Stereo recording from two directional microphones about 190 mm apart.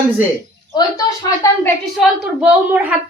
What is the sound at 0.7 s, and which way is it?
A woman's voice, 20° left (ahead or behind).